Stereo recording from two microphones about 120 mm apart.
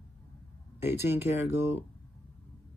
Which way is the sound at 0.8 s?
20° right (ahead or behind).